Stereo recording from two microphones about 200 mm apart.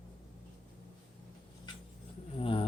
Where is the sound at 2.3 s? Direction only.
25° left (ahead or behind).